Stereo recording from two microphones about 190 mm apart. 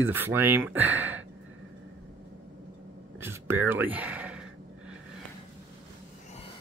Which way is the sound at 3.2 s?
10° right (ahead or behind).